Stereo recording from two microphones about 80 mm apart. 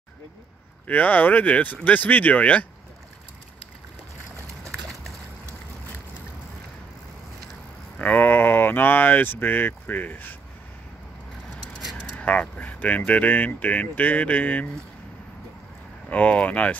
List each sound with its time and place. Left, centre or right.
0.8 s speech: left
8.0 s speech: left
11.8 s a sound: centre
12.2 s speech: centre
16.1 s speech: centre